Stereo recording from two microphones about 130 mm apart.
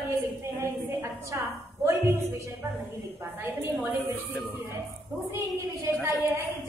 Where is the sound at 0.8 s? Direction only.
20° right (ahead or behind).